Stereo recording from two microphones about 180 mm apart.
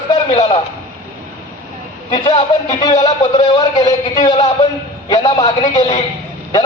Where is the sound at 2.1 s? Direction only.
25° left (ahead or behind).